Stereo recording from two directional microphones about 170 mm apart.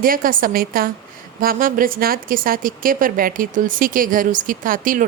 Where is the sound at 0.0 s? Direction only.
55° right (ahead or behind).